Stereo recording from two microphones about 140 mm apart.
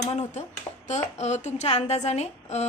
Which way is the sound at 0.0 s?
55° left (ahead or behind).